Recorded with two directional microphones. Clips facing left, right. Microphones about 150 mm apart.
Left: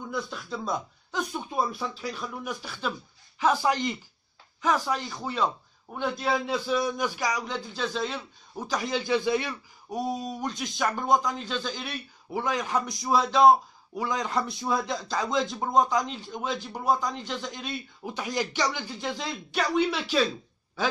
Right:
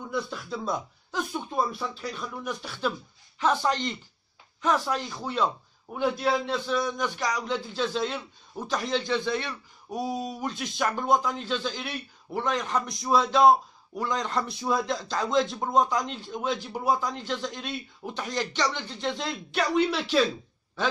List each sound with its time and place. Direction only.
0.1 s a man's voice: centre (ahead or behind)